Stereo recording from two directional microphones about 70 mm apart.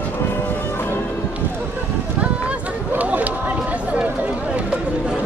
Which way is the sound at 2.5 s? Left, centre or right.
Right.